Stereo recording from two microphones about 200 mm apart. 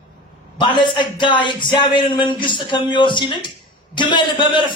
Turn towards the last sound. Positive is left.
turn(degrees=25)  # may be behind; listen again after turning